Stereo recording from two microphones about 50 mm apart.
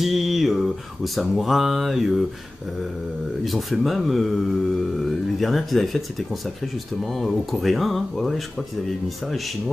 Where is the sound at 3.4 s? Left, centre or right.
Centre.